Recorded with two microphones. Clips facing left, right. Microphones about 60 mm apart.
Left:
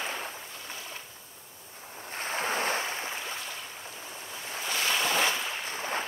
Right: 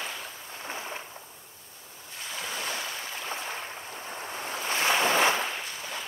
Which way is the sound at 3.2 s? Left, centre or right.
Right.